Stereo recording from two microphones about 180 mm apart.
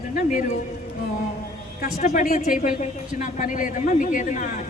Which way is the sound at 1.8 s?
45° left (ahead or behind).